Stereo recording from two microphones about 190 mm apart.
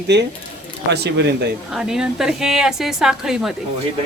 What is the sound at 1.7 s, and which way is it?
A woman's voice, 5° right (ahead or behind).